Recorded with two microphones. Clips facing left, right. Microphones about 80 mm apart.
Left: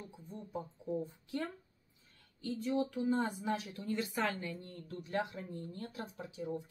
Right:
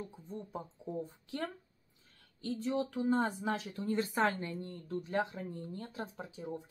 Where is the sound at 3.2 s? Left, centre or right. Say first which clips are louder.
Right 2 dB; right.